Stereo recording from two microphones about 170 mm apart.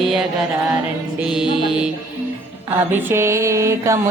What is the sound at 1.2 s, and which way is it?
Mantra, 5° right (ahead or behind).